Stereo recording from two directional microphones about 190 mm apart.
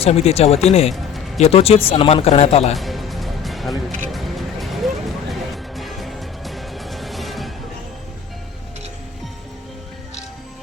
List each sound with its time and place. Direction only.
0.0 s a man's voice: 35° left (ahead or behind)
2.7 s music: centre (ahead or behind)